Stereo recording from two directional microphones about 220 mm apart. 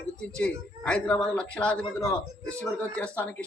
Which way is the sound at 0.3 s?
5° left (ahead or behind).